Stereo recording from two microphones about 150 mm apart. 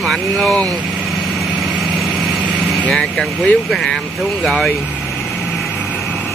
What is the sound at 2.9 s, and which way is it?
Speech, centre (ahead or behind).